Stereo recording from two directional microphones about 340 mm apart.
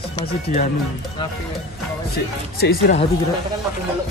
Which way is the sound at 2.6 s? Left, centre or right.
Left.